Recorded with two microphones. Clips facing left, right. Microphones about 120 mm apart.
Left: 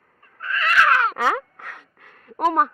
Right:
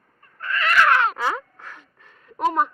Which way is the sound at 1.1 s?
70° left (ahead or behind).